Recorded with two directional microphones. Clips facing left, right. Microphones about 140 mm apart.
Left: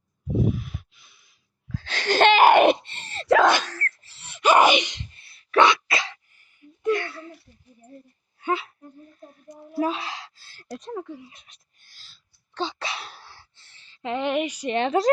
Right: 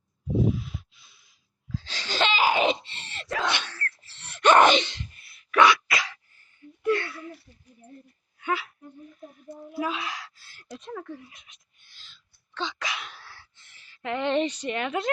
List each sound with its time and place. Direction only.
0.3 s wheeze: 55° left (ahead or behind)
3.4 s wail: 45° left (ahead or behind)
4.1 s a sound: 5° left (ahead or behind)
5.1 s a sound: 30° left (ahead or behind)
8.4 s whimper: 30° left (ahead or behind)
9.7 s a sound: 35° left (ahead or behind)
10.7 s speech: 40° left (ahead or behind)
10.9 s speech: 15° left (ahead or behind)
11.3 s whispering: 35° left (ahead or behind); by 14.7 s 10° left (ahead or behind)
14.7 s speech: 30° left (ahead or behind)